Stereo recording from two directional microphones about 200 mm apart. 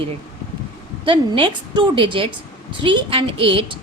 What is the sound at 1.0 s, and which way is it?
A woman's voice, 25° right (ahead or behind).